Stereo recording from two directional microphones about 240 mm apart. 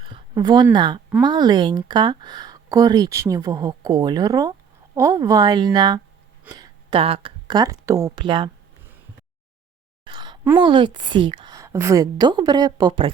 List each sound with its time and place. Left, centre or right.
0.0 s speech: centre
10.0 s a sound: centre
10.6 s speech: centre